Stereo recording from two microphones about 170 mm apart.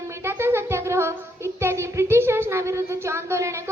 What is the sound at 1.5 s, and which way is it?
A child's voice, 15° right (ahead or behind).